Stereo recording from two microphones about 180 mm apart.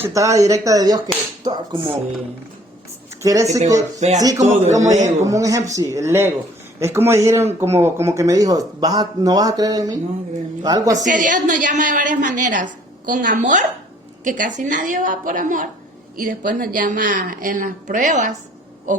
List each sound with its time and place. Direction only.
0.0 s speech: 15° right (ahead or behind)
3.2 s speech: 20° right (ahead or behind)
4.4 s a man's voice: 40° right (ahead or behind)
5.0 s speech: 20° right (ahead or behind)
10.9 s a woman's voice: 45° right (ahead or behind)
18.9 s a sound: 45° right (ahead or behind)